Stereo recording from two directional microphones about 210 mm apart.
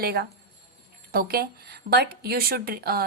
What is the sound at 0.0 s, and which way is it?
A woman's voice, 45° right (ahead or behind).